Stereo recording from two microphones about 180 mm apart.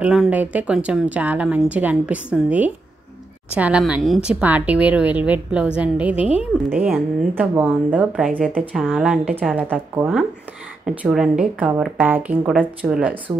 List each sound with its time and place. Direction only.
0.0 s speech: 5° right (ahead or behind)
6.1 s a woman's voice: 35° left (ahead or behind)
6.8 s speech: 10° right (ahead or behind)